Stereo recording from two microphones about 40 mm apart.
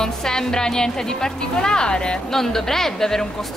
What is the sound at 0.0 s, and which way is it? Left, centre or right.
Speech, centre.